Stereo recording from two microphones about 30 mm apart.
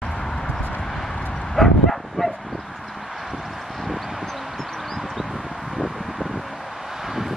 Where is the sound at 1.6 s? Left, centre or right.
Left.